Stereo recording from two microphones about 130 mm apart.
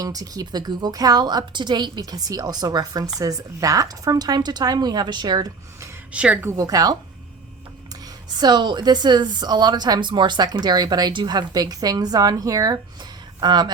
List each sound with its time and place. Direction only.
0.0 s a woman's voice: 30° right (ahead or behind)
6.1 s speech: 10° right (ahead or behind)
6.4 s a woman's voice: 25° right (ahead or behind)
8.4 s a woman's voice: 35° right (ahead or behind)